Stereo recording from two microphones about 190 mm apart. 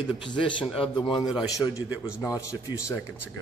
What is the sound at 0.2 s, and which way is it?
A man's voice, 25° left (ahead or behind).